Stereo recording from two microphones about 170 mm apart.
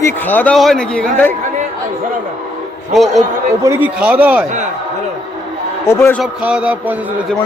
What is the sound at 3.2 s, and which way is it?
A man's voice, 20° right (ahead or behind).